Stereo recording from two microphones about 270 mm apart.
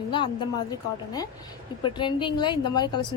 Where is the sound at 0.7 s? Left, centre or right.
Centre.